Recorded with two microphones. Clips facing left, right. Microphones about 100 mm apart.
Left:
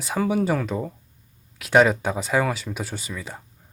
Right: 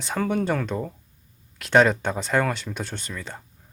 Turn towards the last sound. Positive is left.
turn(degrees=5)  # may be behind; listen again after turning